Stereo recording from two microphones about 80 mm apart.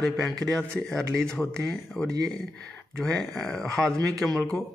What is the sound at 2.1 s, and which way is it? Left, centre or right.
Speech, right.